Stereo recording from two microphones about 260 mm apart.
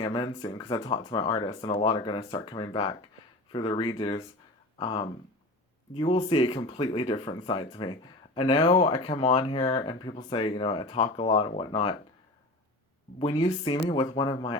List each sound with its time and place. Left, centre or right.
0.0 s speech: centre
13.1 s speech: centre